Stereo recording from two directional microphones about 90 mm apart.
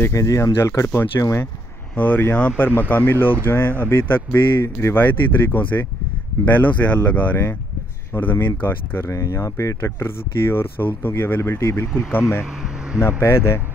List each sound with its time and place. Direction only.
0.1 s speech: 35° left (ahead or behind)
9.1 s speech: 35° left (ahead or behind)